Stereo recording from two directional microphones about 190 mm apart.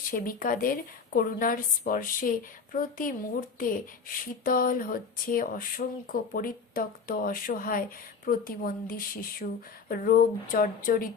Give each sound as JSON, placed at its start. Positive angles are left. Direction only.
{"t": 0.1, "sound": "speech", "side_deg": 45}
{"t": 4.4, "sound": "speech", "side_deg": 50}